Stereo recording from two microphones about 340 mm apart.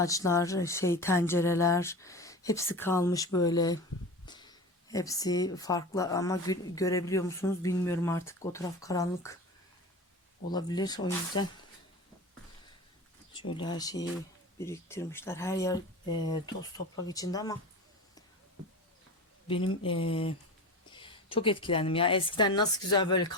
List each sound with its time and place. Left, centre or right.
0.0 s speech: centre
10.5 s speech: centre
13.5 s speech: centre
17.1 s speech: centre
19.5 s speech: centre